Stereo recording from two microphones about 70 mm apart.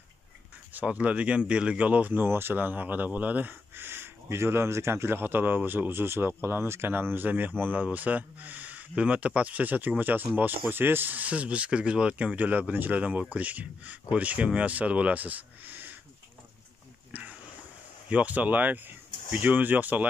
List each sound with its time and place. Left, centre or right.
0.7 s speech: centre
17.1 s a sound: centre
18.1 s speech: right